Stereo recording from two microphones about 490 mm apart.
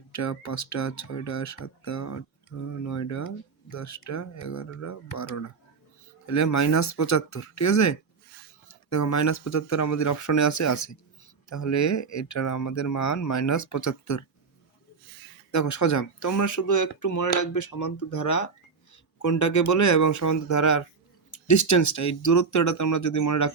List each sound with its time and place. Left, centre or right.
0.1 s speech: left
15.5 s speech: left